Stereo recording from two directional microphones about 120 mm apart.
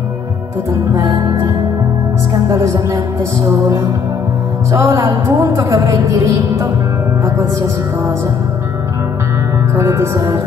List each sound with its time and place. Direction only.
0.9 s music: 30° right (ahead or behind)
2.4 s a woman's voice: 25° right (ahead or behind)
9.8 s a woman's voice: 25° right (ahead or behind)